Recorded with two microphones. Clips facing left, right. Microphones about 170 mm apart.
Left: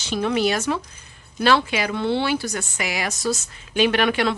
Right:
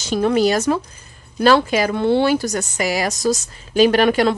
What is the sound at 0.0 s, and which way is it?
A woman's voice, 40° right (ahead or behind).